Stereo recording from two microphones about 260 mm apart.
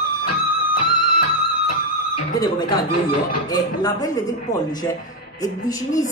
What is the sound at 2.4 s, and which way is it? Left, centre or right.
A man's voice, centre.